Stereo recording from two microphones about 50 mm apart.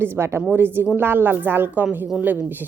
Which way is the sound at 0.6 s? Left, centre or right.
Right.